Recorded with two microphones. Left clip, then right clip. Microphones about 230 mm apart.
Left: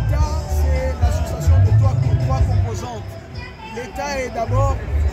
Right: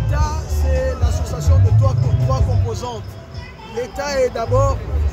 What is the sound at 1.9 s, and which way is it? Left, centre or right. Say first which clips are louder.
Speech: right 2 dB; centre.